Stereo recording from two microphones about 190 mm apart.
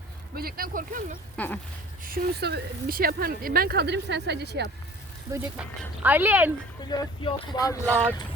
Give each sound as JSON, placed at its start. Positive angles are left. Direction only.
{"t": 0.3, "sound": "speech", "side_deg": -50}
{"t": 1.4, "sound": "speech", "side_deg": 5}
{"t": 2.0, "sound": "speech", "side_deg": -55}
{"t": 5.3, "sound": "speech", "side_deg": -15}
{"t": 6.8, "sound": "speech", "side_deg": 25}